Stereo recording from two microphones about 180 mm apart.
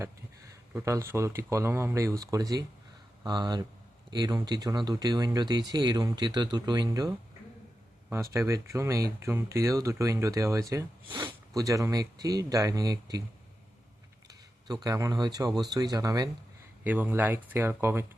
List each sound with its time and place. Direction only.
0.7 s speech: 15° right (ahead or behind)
8.1 s speech: 15° right (ahead or behind)
14.3 s speech: 20° right (ahead or behind)
16.8 s speech: 10° right (ahead or behind)